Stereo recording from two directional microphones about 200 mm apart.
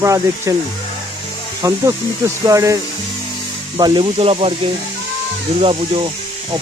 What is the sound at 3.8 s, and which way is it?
Speech, 25° right (ahead or behind).